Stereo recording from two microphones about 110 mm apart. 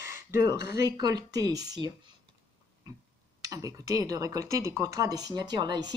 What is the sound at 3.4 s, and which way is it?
Speech, 35° right (ahead or behind).